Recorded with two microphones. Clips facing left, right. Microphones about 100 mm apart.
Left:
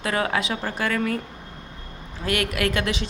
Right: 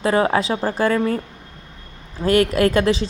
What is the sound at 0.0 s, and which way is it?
A woman's voice, 30° right (ahead or behind).